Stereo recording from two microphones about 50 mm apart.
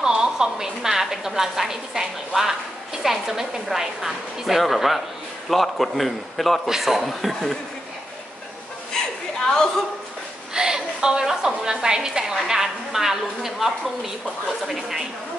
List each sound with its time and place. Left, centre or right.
0.0 s a woman's voice: centre
9.0 s chuckle: centre
10.5 s a woman's voice: centre